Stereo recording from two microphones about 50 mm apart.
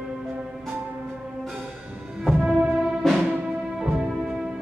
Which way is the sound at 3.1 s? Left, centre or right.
Centre.